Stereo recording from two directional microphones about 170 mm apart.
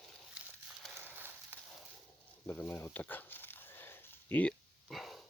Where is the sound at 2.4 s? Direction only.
10° left (ahead or behind).